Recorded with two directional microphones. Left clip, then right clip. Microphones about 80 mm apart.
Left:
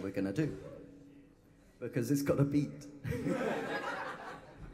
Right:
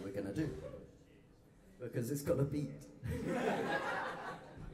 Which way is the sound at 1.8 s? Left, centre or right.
Left.